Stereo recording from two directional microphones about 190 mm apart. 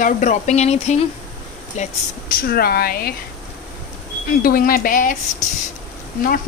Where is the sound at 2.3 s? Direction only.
50° left (ahead or behind).